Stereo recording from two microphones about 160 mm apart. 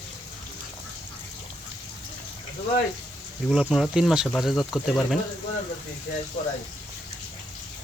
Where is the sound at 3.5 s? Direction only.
Centre (ahead or behind).